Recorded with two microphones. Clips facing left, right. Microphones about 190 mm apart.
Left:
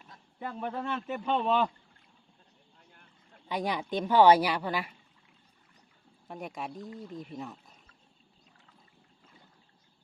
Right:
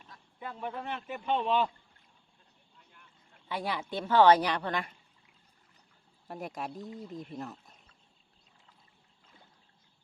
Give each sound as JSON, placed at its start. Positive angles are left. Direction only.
{"t": 0.3, "sound": "a man's voice", "side_deg": 45}
{"t": 2.7, "sound": "boat", "side_deg": 45}
{"t": 3.5, "sound": "a woman's voice", "side_deg": 15}
{"t": 6.2, "sound": "speech", "side_deg": 0}